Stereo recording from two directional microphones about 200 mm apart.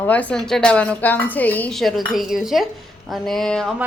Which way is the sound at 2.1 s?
Centre (ahead or behind).